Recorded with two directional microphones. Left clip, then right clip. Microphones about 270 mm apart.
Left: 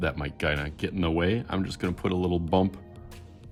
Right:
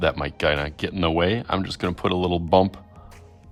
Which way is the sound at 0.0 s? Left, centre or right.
Right.